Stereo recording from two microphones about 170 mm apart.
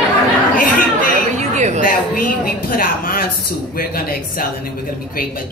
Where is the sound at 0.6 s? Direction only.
55° left (ahead or behind).